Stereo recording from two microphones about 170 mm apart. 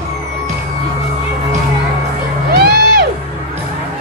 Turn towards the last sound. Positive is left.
turn(degrees=-70)  # may be behind; listen again after turning